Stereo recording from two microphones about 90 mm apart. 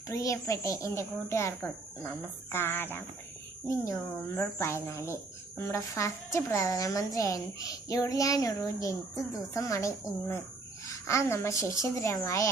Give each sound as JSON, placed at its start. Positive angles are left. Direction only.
{"t": 0.1, "sound": "speech", "side_deg": 35}
{"t": 4.4, "sound": "speech", "side_deg": 30}